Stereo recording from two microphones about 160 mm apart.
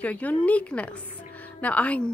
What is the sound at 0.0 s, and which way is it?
A woman's voice, 10° left (ahead or behind).